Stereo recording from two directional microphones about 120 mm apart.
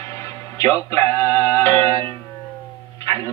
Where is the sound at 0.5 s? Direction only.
25° left (ahead or behind).